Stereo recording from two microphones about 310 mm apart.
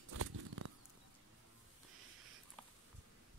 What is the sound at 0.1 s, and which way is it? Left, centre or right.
Bird flight, right.